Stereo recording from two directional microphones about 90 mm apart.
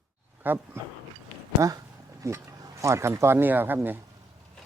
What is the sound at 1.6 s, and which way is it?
Speech, 40° right (ahead or behind).